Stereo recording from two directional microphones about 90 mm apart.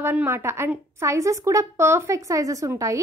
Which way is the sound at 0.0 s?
20° right (ahead or behind).